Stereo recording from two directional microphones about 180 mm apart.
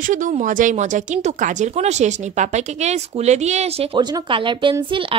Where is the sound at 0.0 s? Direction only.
45° right (ahead or behind).